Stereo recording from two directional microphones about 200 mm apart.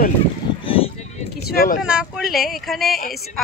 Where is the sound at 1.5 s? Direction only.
50° left (ahead or behind).